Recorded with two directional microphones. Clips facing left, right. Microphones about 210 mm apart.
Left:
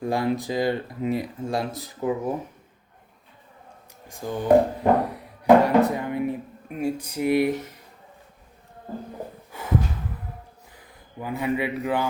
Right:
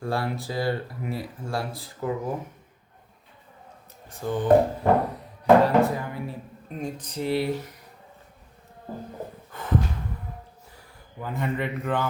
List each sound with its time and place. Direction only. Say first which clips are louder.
0.0 s speech: left 4 dB; 15° left (ahead or behind)
4.1 s speech: left 1 dB; 10° left (ahead or behind)
6.7 s speech: left 6 dB; 10° left (ahead or behind)
9.5 s snort: left 1 dB; 10° left (ahead or behind)
11.2 s speech: left 3 dB; 10° left (ahead or behind)